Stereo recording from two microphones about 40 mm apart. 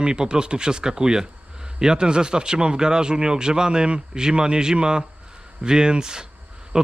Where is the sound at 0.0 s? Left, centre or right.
Right.